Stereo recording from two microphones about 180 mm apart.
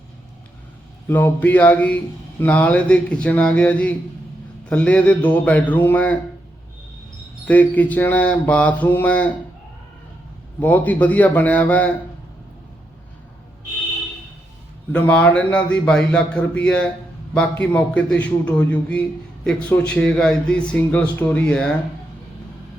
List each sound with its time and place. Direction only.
1.0 s mantra: 10° left (ahead or behind)
7.4 s mantra: 10° left (ahead or behind)
10.6 s mantra: 10° left (ahead or behind)
14.9 s mantra: 10° left (ahead or behind)
19.5 s speech: 5° left (ahead or behind)